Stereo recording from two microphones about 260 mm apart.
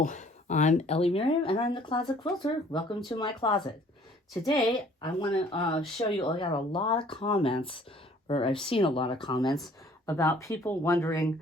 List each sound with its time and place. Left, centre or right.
0.0 s speech: left; by 11.3 s centre